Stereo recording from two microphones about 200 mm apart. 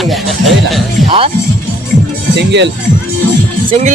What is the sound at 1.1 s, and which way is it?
Speech, 30° right (ahead or behind).